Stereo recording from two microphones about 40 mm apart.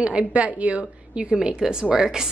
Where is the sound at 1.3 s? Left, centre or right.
Centre.